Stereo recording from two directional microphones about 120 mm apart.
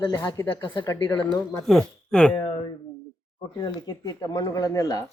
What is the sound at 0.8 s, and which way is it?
Speech, 25° left (ahead or behind).